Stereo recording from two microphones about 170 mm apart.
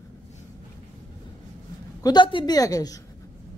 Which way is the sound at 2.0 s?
25° left (ahead or behind).